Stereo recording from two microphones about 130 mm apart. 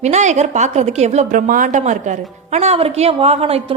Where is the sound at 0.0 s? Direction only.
60° right (ahead or behind).